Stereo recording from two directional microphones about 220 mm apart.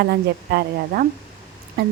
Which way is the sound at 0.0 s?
45° right (ahead or behind).